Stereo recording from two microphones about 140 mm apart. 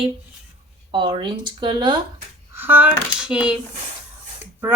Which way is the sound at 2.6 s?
15° right (ahead or behind).